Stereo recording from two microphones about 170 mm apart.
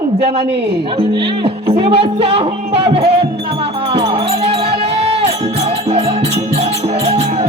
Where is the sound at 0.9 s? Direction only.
30° right (ahead or behind).